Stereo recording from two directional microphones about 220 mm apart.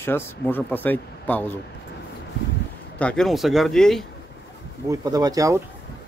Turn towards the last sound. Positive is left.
turn(degrees=-15)  # may be behind; listen again after turning